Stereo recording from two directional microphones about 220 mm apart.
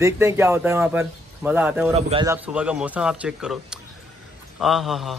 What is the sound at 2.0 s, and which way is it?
Speech, 25° right (ahead or behind).